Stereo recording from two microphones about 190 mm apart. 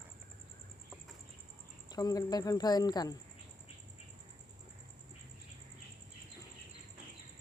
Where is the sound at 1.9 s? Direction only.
20° left (ahead or behind).